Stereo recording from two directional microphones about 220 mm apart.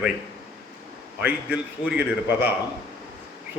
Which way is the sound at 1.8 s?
5° right (ahead or behind).